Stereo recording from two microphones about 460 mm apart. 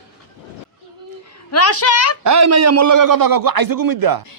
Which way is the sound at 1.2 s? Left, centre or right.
Left.